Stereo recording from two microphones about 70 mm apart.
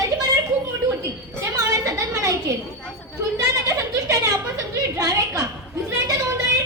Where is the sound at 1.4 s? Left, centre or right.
Right.